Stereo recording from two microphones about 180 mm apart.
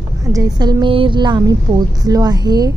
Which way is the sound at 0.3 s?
20° right (ahead or behind).